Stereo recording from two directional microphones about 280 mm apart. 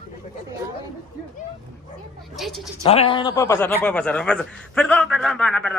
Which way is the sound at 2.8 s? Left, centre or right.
Centre.